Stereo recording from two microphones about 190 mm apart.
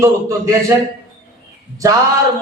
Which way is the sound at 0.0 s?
15° right (ahead or behind).